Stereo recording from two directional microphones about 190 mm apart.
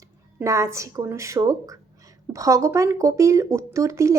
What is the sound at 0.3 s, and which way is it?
Speech, 15° right (ahead or behind).